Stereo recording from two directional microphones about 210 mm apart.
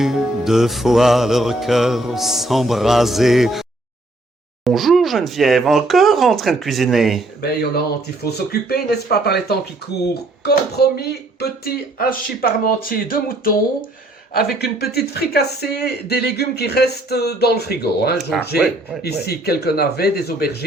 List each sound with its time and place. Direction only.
0.0 s music: centre (ahead or behind)
8.2 s speech: 50° left (ahead or behind)
18.3 s music: centre (ahead or behind)
19.0 s speech: 50° left (ahead or behind)